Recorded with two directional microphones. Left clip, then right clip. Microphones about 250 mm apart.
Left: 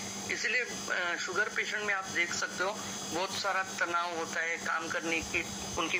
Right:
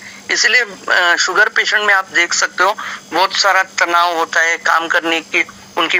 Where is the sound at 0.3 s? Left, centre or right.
Right.